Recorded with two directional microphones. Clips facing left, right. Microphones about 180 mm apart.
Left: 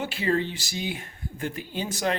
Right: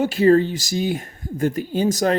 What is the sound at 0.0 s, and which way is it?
Speech, 40° right (ahead or behind).